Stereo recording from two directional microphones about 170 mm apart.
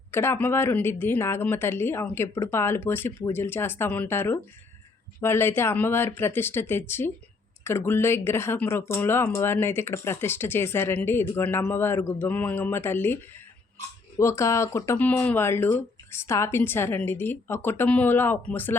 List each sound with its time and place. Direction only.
0.1 s speech: 15° left (ahead or behind)
14.2 s speech: 15° left (ahead or behind)